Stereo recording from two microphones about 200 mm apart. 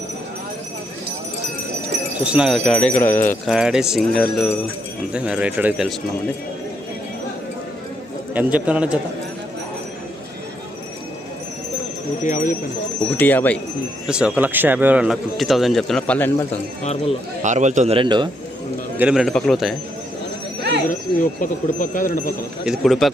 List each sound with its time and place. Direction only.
2.1 s speech: 5° right (ahead or behind)
8.3 s a man's voice: 5° right (ahead or behind)
12.2 s speech: 40° left (ahead or behind)
13.1 s speech: 10° left (ahead or behind)
14.1 s speech: 5° right (ahead or behind)
16.8 s speech: 30° left (ahead or behind)
17.4 s a man's voice: 35° right (ahead or behind)
18.9 s speech: 5° right (ahead or behind)
20.6 s horse: 60° right (ahead or behind)
21.8 s speech: 40° left (ahead or behind)
22.6 s speech: centre (ahead or behind)